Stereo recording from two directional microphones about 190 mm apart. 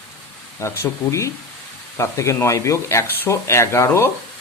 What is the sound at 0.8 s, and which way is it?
Speech, 15° left (ahead or behind).